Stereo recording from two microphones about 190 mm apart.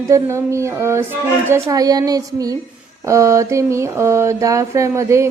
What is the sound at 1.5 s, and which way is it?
A woman's voice, 15° right (ahead or behind).